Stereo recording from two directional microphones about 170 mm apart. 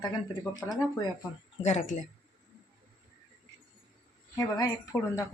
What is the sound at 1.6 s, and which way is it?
Speech, 40° left (ahead or behind).